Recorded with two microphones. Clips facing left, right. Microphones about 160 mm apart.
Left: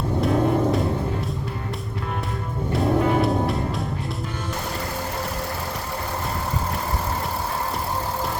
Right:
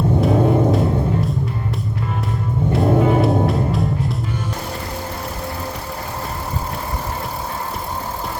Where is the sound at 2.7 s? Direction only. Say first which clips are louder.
Right 4 dB; centre (ahead or behind).